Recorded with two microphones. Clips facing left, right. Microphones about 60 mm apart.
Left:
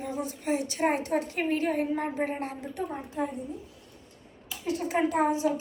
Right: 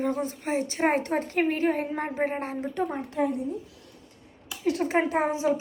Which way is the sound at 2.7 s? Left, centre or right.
Right.